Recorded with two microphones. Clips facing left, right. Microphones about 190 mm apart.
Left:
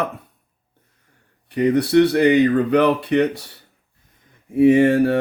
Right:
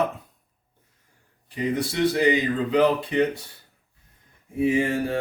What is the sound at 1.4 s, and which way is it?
Speech, 65° left (ahead or behind).